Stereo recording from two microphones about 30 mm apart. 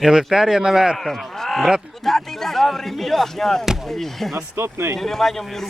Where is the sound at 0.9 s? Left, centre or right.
Centre.